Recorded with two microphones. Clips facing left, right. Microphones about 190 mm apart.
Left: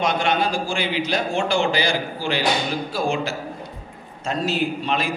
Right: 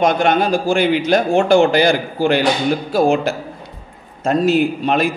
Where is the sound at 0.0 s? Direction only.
50° right (ahead or behind).